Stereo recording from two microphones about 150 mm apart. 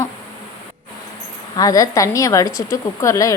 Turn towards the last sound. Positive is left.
turn(degrees=20)  # may be behind; listen again after turning